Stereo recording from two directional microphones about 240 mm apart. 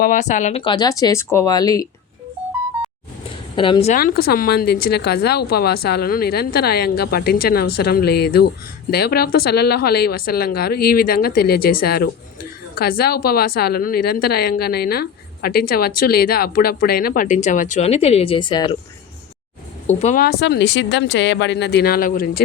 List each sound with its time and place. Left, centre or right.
0.0 s speech: left; by 1.9 s centre
3.5 s speech: left
19.9 s speech: left